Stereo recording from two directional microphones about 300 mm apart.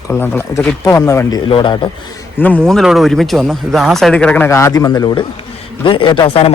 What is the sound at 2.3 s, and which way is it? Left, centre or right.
A man's voice, centre.